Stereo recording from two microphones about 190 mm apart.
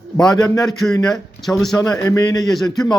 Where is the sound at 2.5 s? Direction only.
Centre (ahead or behind).